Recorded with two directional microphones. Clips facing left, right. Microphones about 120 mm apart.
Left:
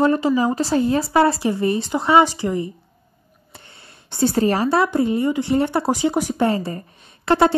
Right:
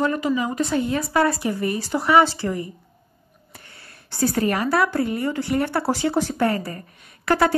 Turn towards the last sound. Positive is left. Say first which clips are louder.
# left 3 dB
turn(degrees=25)  # may be behind; listen again after turning